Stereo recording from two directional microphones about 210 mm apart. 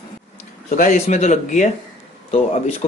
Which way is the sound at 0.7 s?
40° left (ahead or behind).